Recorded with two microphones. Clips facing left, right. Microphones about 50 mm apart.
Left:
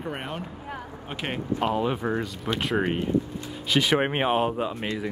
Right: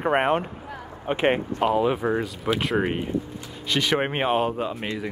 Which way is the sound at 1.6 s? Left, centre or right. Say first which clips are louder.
Right 2 dB; centre.